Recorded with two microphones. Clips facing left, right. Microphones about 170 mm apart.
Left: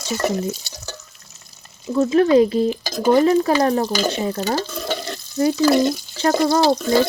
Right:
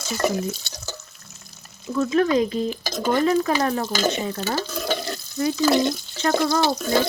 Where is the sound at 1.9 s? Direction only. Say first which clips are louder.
Left 5 dB; 30° left (ahead or behind).